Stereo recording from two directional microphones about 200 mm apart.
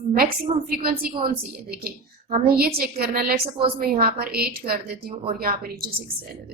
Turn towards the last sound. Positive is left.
turn(degrees=-50)  # may be behind; listen again after turning